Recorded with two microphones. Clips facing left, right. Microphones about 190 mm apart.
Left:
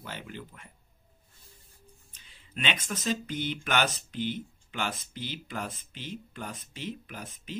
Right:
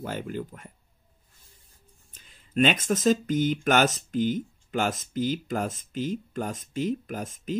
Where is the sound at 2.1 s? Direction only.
45° right (ahead or behind).